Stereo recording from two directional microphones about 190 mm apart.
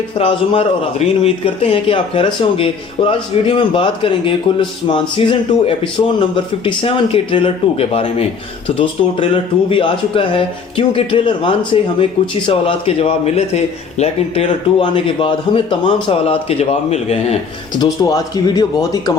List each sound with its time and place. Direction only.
0.2 s speech: 30° left (ahead or behind)
17.7 s speech: 20° left (ahead or behind)